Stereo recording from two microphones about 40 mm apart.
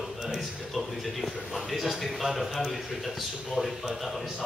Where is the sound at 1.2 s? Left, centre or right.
Centre.